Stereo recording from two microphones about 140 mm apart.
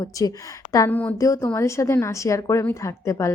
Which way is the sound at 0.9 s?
10° left (ahead or behind).